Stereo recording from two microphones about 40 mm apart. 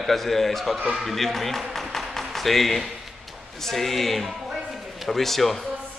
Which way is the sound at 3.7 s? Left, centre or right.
Centre.